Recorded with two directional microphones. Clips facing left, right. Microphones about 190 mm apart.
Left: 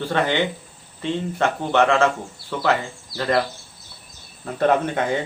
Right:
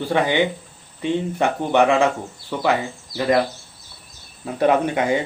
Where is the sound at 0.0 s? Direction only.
15° right (ahead or behind).